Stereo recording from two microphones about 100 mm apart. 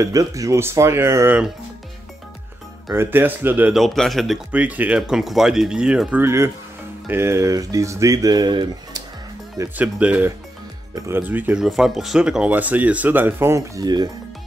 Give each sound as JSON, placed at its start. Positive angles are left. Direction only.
{"t": 0.0, "sound": "speech", "side_deg": -35}
{"t": 2.9, "sound": "speech", "side_deg": -20}
{"t": 3.7, "sound": "speech", "side_deg": 0}
{"t": 4.5, "sound": "speech", "side_deg": -15}
{"t": 6.2, "sound": "speech", "side_deg": -25}
{"t": 9.8, "sound": "speech", "side_deg": -15}
{"t": 11.6, "sound": "speech", "side_deg": -5}
{"t": 13.8, "sound": "speech", "side_deg": -45}